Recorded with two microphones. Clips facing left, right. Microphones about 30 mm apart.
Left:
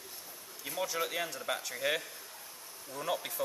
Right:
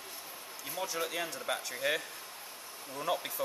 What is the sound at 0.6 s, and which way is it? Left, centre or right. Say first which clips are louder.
Speech: left 2 dB; centre.